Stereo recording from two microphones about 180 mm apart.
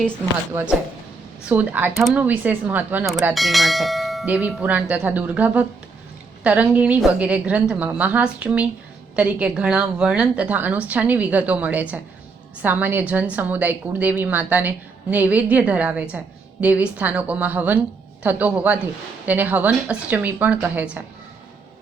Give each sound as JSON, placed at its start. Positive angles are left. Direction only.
{"t": 0.5, "sound": "a woman's voice", "side_deg": -5}